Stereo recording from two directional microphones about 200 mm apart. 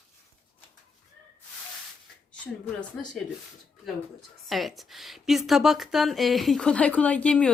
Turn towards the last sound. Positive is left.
turn(degrees=5)  # may be behind; listen again after turning